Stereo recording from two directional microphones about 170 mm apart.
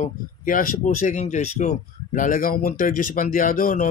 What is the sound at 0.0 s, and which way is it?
Speech, 50° left (ahead or behind).